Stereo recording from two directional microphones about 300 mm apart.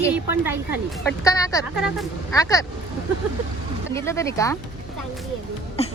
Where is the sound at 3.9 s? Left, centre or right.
Centre.